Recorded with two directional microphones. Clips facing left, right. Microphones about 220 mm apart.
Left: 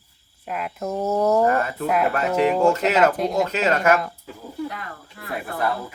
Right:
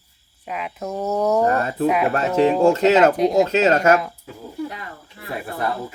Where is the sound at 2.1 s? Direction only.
35° right (ahead or behind).